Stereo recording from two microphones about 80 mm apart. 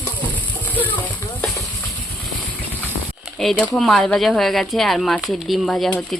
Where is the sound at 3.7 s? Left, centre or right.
Centre.